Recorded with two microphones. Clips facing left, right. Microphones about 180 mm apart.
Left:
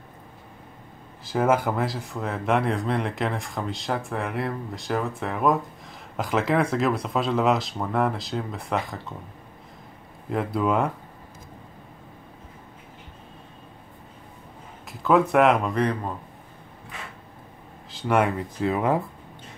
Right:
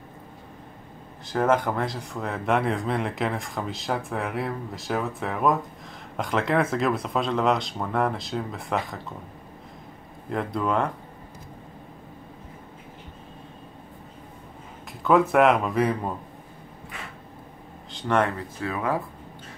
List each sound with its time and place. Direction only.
1.2 s speech: 5° left (ahead or behind)
10.3 s speech: 5° left (ahead or behind)
14.9 s speech: centre (ahead or behind)
17.9 s speech: 10° left (ahead or behind)